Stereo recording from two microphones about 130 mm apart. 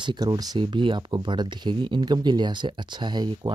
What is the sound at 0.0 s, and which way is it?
Speech, 35° right (ahead or behind).